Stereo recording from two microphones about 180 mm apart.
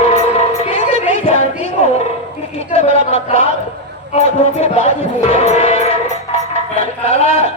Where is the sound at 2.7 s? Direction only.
35° left (ahead or behind).